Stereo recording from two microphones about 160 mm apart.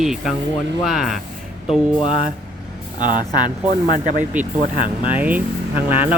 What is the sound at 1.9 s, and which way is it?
Speech, 35° left (ahead or behind).